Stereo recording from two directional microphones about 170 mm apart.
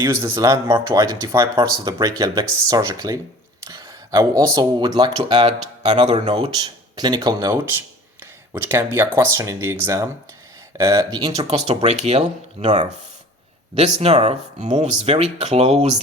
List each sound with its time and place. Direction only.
0.0 s speech: 15° right (ahead or behind)
5.3 s speech: 40° right (ahead or behind); by 11.3 s 20° right (ahead or behind)
11.3 s speech: 40° right (ahead or behind)